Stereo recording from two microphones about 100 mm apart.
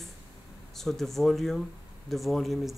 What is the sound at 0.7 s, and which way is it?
Speech, 5° left (ahead or behind).